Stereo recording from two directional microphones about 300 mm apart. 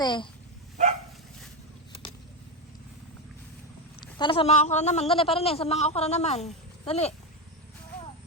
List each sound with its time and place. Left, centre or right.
0.0 s speech: centre
4.0 s a man's voice: centre